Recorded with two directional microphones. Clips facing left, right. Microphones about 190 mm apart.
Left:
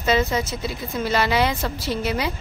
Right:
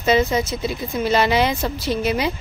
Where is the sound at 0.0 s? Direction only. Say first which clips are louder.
Right 3 dB; 15° right (ahead or behind).